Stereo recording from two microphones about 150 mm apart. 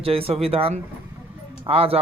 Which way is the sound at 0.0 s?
40° right (ahead or behind).